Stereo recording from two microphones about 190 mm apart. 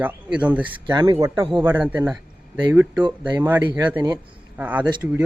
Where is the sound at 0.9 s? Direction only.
20° right (ahead or behind).